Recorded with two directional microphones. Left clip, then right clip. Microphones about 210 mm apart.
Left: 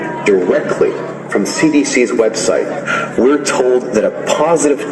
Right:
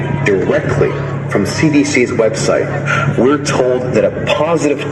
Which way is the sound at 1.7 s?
50° right (ahead or behind).